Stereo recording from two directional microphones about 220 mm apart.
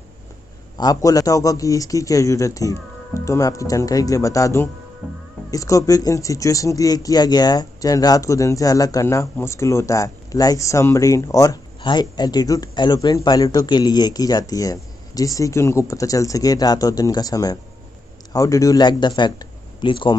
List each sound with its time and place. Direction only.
0.7 s speech: 15° left (ahead or behind)